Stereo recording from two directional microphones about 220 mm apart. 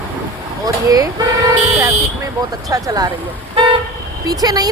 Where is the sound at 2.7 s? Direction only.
15° right (ahead or behind).